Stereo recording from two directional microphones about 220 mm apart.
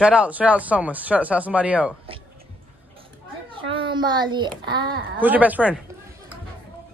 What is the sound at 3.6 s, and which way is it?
Speech, 25° right (ahead or behind).